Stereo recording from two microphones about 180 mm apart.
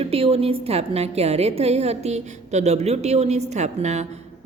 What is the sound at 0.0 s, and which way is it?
A woman's voice, 35° right (ahead or behind).